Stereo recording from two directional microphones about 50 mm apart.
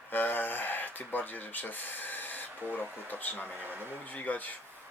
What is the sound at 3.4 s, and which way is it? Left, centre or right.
Speech, right.